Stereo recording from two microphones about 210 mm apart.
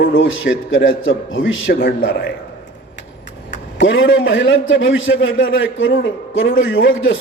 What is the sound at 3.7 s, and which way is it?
A man's voice, 65° left (ahead or behind).